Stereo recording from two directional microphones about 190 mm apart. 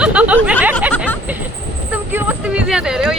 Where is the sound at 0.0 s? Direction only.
5° right (ahead or behind).